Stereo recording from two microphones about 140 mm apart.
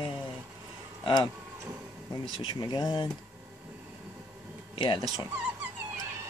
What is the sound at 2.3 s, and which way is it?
Speech, 35° left (ahead or behind).